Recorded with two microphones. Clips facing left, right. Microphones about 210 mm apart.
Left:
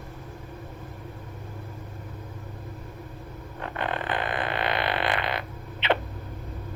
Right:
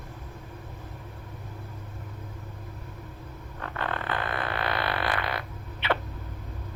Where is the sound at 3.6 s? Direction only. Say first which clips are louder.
Left 2 dB; 20° left (ahead or behind).